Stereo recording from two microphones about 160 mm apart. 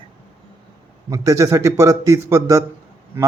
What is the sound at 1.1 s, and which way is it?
A man's voice, 20° right (ahead or behind).